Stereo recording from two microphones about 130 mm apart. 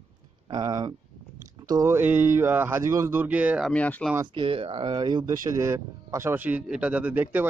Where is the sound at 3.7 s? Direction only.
10° left (ahead or behind).